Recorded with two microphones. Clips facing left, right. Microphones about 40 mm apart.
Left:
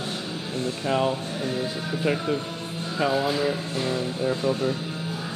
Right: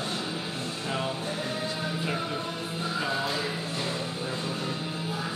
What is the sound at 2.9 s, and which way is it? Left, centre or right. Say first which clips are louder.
Speech: left 7 dB; centre.